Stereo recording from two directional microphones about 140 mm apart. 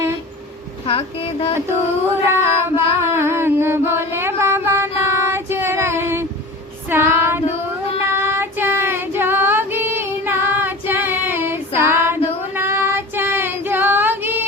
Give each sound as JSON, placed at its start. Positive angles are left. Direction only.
{"t": 0.9, "sound": "speech", "side_deg": 40}
{"t": 2.0, "sound": "music", "side_deg": -15}
{"t": 6.8, "sound": "female singing", "side_deg": -15}
{"t": 8.0, "sound": "child singing", "side_deg": -15}